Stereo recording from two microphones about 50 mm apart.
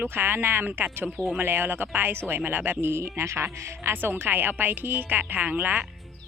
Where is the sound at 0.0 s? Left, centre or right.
Right.